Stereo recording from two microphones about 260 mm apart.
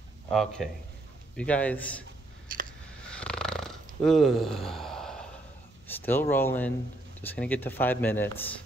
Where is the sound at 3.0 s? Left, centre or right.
Centre.